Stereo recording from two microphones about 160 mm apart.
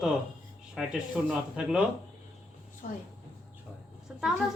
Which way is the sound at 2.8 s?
60° left (ahead or behind).